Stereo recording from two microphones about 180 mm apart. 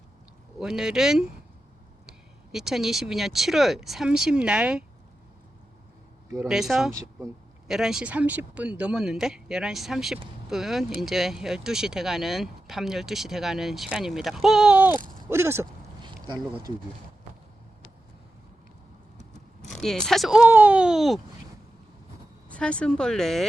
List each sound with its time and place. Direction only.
0.6 s speech: 5° right (ahead or behind)
6.5 s speech: 5° right (ahead or behind)
16.0 s a sound: 25° right (ahead or behind)
19.6 s speech: centre (ahead or behind)
22.4 s speech: 5° left (ahead or behind)